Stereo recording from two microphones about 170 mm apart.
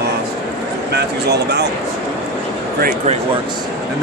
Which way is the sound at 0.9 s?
75° right (ahead or behind).